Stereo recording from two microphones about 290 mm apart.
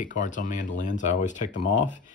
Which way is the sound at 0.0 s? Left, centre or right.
Left.